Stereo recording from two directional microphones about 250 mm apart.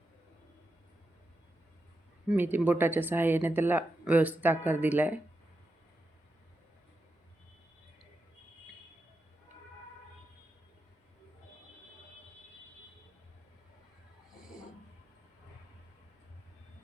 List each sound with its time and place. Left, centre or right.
2.3 s speech: centre